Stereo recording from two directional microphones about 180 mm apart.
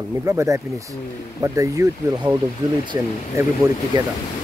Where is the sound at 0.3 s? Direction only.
20° right (ahead or behind).